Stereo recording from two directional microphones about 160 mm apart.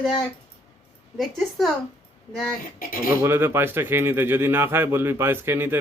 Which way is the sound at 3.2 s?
15° right (ahead or behind).